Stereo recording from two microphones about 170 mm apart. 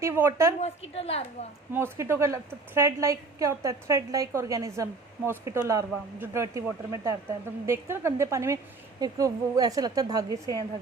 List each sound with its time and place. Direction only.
0.0 s a woman's voice: 15° right (ahead or behind)
0.6 s a woman's voice: 35° left (ahead or behind)
1.7 s a woman's voice: 15° right (ahead or behind)